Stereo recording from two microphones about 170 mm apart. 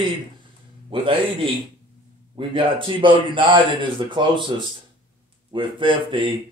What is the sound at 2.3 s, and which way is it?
Speech, 30° right (ahead or behind).